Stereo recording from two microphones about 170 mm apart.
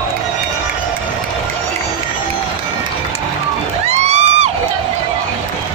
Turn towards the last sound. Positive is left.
turn(degrees=-40)  # may be behind; listen again after turning